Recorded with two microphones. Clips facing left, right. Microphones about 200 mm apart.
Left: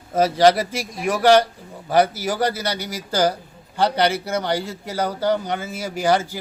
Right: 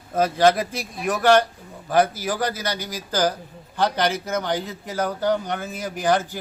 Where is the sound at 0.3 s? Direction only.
10° left (ahead or behind).